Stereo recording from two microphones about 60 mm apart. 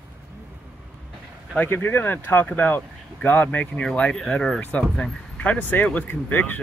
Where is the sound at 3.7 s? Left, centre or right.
Left.